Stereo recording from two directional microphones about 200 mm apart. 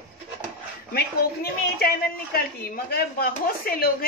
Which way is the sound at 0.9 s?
50° left (ahead or behind).